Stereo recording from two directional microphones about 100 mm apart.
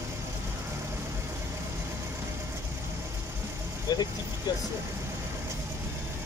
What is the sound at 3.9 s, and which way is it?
Speech, 40° left (ahead or behind).